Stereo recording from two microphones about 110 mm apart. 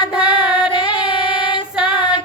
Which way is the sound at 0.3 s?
45° left (ahead or behind).